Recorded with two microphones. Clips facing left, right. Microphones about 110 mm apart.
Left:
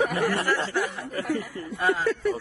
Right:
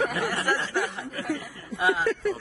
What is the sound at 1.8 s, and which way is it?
Speech, centre (ahead or behind).